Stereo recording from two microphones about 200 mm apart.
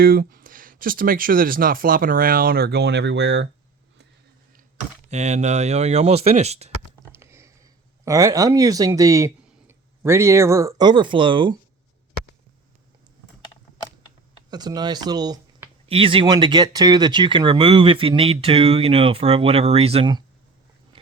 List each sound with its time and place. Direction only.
0.0 s speech: 45° right (ahead or behind)
5.0 s speech: 35° right (ahead or behind)
7.1 s a sound: 15° right (ahead or behind)
8.0 s speech: 15° right (ahead or behind)
14.5 s speech: 20° right (ahead or behind)